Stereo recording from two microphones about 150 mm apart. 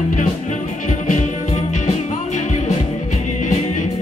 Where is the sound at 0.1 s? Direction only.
55° left (ahead or behind).